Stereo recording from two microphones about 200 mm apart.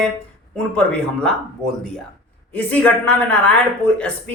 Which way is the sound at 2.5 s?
5° left (ahead or behind).